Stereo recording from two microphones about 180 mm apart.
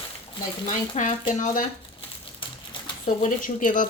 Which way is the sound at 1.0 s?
40° left (ahead or behind).